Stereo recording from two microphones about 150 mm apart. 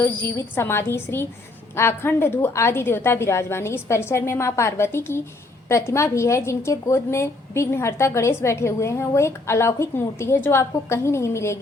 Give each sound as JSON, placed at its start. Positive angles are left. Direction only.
{"t": 0.0, "sound": "a woman's voice", "side_deg": 15}